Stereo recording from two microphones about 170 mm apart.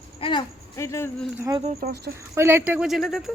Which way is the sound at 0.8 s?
15° left (ahead or behind).